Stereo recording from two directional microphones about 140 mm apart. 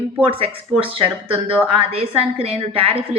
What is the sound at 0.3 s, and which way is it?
A woman's voice, 40° right (ahead or behind).